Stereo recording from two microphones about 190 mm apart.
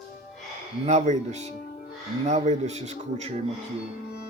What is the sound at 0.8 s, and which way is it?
Speech, 35° right (ahead or behind).